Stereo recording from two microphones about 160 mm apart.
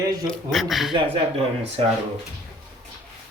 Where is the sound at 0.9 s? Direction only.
35° right (ahead or behind).